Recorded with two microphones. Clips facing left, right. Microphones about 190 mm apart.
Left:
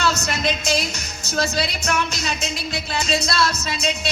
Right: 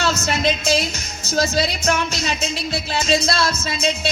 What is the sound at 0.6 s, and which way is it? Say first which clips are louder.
Speech: right 3 dB; 35° left (ahead or behind).